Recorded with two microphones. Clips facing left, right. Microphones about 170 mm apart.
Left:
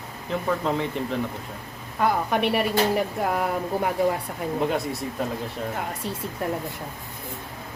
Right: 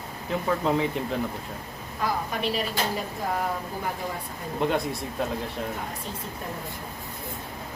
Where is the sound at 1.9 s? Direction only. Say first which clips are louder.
Left 6 dB; 65° left (ahead or behind).